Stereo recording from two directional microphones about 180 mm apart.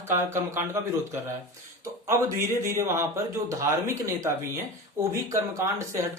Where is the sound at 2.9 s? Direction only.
15° right (ahead or behind).